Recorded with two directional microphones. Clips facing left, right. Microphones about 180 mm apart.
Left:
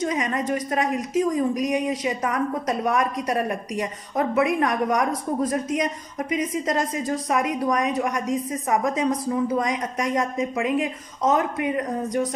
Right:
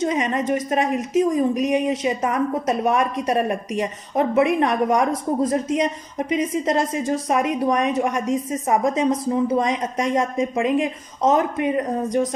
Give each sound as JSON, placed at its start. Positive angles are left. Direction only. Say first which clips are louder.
{"t": 0.0, "sound": "a woman's voice", "louder": "right 3 dB", "side_deg": -25}